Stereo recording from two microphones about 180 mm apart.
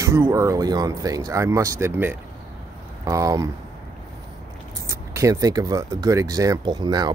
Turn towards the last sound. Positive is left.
turn(degrees=-25)  # may be behind; listen again after turning